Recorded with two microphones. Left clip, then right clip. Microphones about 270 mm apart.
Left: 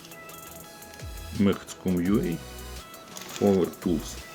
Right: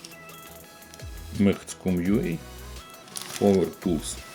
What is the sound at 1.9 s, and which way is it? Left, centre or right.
Speech, centre.